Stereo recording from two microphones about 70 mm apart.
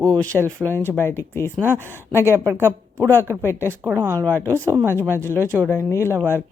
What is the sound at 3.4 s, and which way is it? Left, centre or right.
Speech, left.